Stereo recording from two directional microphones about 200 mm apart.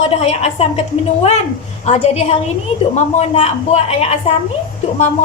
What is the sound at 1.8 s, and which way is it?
A woman's voice, 30° left (ahead or behind).